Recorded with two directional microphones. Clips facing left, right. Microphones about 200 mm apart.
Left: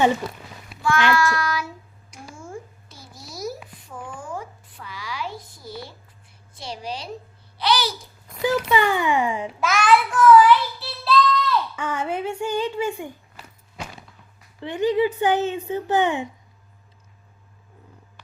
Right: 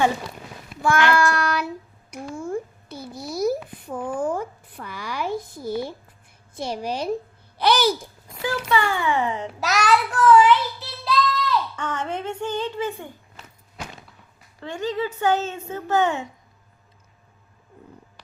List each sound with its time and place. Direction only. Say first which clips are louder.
0.8 s child singing: right 1 dB; 55° right (ahead or behind)
3.8 s a sound: right 10 dB; 55° right (ahead or behind)
6.6 s a woman's voice: right 6 dB; 55° right (ahead or behind)
8.4 s speech: left 3 dB; 15° left (ahead or behind)
9.6 s child singing: left 2 dB; 40° right (ahead or behind); by 11.5 s 20° right (ahead or behind)
11.8 s speech: left 2 dB; 10° left (ahead or behind)
14.6 s speech: left 6 dB; 15° left (ahead or behind)